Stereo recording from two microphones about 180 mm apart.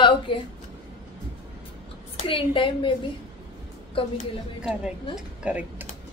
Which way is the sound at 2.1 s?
30° left (ahead or behind).